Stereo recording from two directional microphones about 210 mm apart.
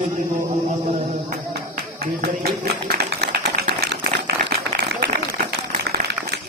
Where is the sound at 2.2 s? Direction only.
45° right (ahead or behind).